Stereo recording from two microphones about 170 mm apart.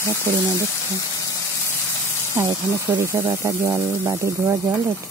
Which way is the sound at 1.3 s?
15° left (ahead or behind).